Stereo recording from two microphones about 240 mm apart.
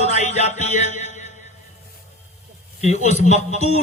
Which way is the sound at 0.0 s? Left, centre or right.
Left.